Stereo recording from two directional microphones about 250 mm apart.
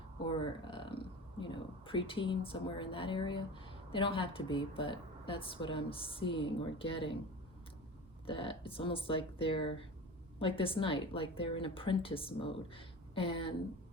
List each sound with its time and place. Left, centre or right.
0.3 s a sound: centre
1.4 s speech: centre
8.3 s speech: left